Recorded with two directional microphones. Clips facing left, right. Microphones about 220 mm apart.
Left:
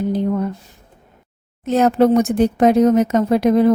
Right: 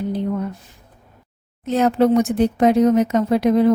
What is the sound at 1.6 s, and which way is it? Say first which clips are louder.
A woman's voice: left 2 dB; 45° left (ahead or behind).